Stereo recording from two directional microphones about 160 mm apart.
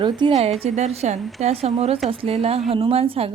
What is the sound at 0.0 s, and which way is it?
A woman's voice, 30° right (ahead or behind).